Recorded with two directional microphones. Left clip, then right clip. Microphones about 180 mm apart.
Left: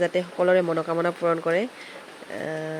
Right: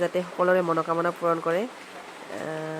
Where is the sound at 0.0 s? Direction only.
15° left (ahead or behind).